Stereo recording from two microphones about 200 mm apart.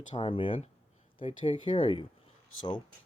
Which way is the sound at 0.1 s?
25° left (ahead or behind).